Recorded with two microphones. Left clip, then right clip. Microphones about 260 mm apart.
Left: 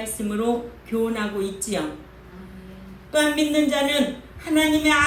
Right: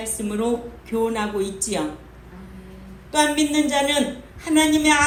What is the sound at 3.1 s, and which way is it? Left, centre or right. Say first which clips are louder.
A woman's voice: right 1 dB; right.